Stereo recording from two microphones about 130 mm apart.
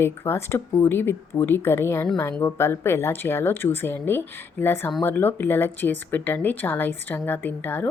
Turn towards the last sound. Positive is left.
turn(degrees=15)  # may be behind; listen again after turning